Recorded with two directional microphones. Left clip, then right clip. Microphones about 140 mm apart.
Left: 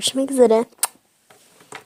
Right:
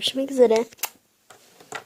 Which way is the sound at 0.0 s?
40° left (ahead or behind).